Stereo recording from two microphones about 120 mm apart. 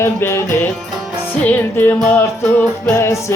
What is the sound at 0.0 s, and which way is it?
Music, 20° left (ahead or behind).